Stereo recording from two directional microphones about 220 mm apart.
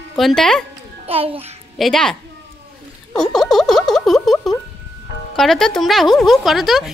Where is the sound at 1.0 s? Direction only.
25° right (ahead or behind).